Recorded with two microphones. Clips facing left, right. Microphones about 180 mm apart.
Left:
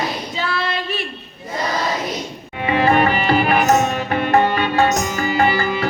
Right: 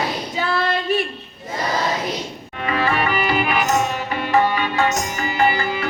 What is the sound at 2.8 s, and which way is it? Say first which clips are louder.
Music: left 6 dB; 40° left (ahead or behind).